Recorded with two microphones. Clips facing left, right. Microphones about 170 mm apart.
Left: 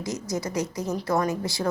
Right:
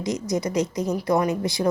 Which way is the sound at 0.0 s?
20° right (ahead or behind).